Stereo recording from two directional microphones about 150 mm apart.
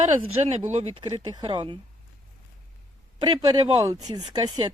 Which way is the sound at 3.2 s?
25° right (ahead or behind).